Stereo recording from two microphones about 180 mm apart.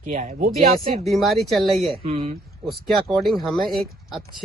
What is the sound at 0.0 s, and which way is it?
Speech, 40° right (ahead or behind).